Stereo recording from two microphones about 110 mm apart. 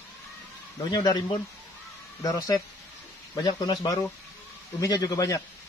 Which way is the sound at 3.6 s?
35° left (ahead or behind).